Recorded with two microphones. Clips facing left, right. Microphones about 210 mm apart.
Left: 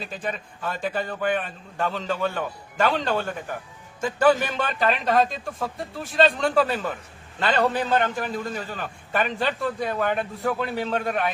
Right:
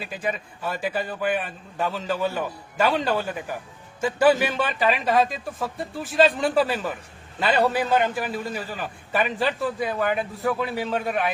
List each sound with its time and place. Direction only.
0.0 s a man's voice: 10° right (ahead or behind)